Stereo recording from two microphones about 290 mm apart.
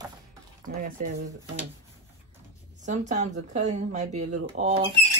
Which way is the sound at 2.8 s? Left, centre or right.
Right.